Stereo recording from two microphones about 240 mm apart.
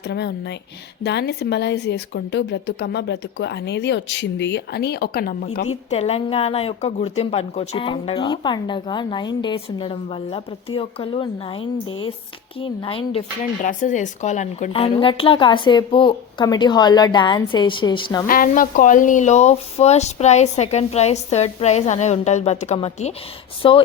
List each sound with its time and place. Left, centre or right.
0.1 s a woman's voice: left
5.9 s speech: left
18.3 s speech: left; by 23.8 s centre